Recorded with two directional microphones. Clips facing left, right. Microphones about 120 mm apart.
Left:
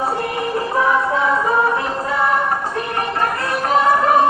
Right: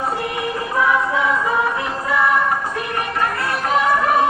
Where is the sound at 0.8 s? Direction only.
35° left (ahead or behind).